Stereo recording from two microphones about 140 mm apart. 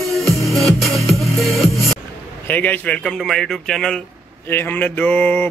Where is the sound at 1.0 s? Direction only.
Centre (ahead or behind).